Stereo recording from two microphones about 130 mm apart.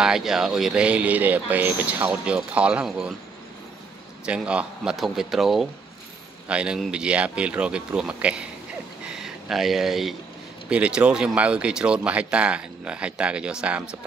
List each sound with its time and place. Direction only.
0.0 s speech: 5° right (ahead or behind)
4.3 s a man's voice: 10° right (ahead or behind)
9.0 s a sound: 5° right (ahead or behind)
10.7 s speech: 10° right (ahead or behind)